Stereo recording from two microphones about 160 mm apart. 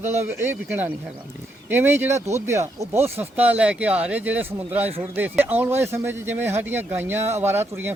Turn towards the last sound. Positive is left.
turn(degrees=-15)  # may be behind; listen again after turning